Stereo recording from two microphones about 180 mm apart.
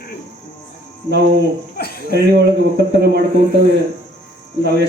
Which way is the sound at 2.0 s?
60° right (ahead or behind).